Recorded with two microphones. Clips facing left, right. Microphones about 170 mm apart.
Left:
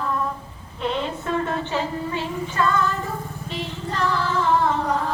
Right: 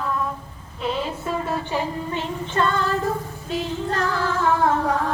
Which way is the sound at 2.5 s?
30° right (ahead or behind).